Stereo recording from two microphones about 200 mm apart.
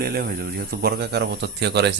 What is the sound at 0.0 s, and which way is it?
Speech, 50° right (ahead or behind).